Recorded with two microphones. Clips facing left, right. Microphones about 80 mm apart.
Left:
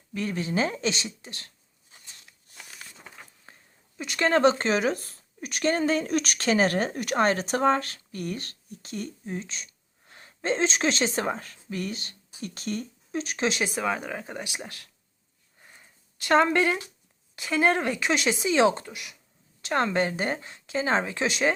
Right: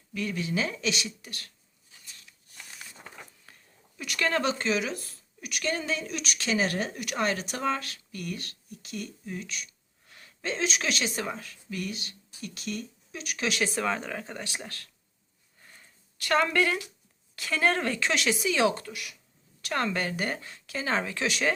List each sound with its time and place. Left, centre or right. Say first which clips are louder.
0.1 s speech: left 2 dB; left
3.5 s sneeze: left 3 dB; left
3.9 s speech: left 5 dB; left
15.6 s a sound: left 1 dB; centre
17.3 s speech: left 3 dB; left